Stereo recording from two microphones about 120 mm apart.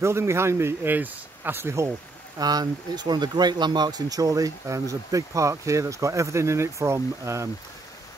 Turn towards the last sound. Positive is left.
turn(degrees=-25)  # may be behind; listen again after turning